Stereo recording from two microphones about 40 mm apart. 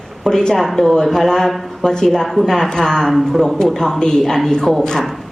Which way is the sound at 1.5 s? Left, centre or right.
Centre.